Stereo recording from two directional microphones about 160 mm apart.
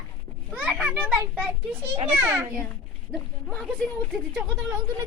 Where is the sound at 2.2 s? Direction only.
15° right (ahead or behind).